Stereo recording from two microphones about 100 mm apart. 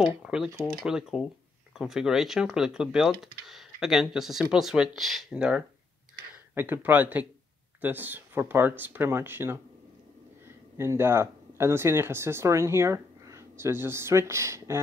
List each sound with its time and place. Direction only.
0.0 s speech: 5° right (ahead or behind); by 9.6 s 20° right (ahead or behind)
10.8 s speech: 25° right (ahead or behind)